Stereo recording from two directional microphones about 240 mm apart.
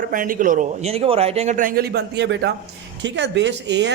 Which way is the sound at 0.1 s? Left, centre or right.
Right.